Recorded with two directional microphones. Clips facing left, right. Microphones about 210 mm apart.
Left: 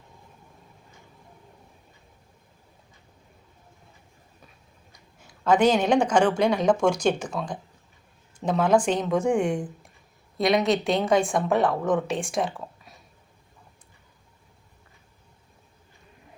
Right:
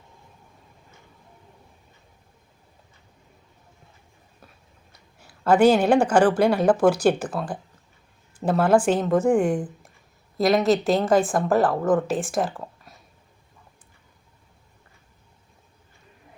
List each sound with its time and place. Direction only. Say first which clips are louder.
4.9 s a woman's voice: even; 5° right (ahead or behind)